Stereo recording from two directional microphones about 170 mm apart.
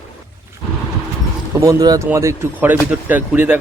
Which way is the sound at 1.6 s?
20° right (ahead or behind).